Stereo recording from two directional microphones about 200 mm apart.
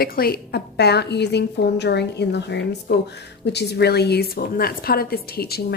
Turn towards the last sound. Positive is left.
turn(degrees=50)  # may be behind; listen again after turning